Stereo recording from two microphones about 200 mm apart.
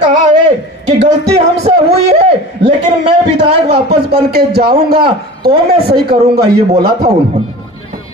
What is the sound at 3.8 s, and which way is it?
A man's voice, 50° right (ahead or behind).